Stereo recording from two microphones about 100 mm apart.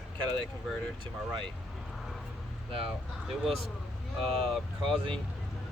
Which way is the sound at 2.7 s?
65° right (ahead or behind).